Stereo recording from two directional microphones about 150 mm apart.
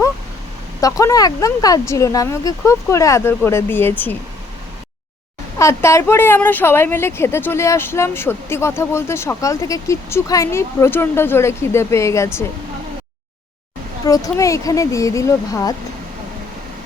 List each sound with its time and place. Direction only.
0.8 s speech: 20° left (ahead or behind)
5.5 s speech: 20° left (ahead or behind)
14.0 s speech: 25° left (ahead or behind)